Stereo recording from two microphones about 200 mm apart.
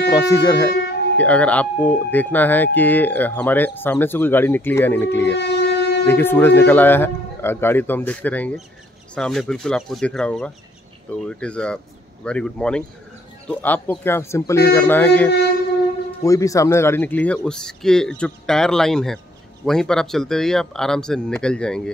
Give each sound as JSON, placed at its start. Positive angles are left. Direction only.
{"t": 0.1, "sound": "speech", "side_deg": 15}
{"t": 0.7, "sound": "music", "side_deg": 55}
{"t": 1.1, "sound": "speech", "side_deg": 5}
{"t": 5.3, "sound": "train", "side_deg": 60}
{"t": 6.0, "sound": "speech", "side_deg": 10}